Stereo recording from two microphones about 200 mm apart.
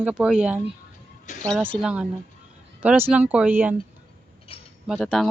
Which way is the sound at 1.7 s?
5° right (ahead or behind).